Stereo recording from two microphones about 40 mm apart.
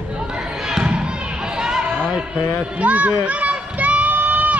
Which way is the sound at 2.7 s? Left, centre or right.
Right.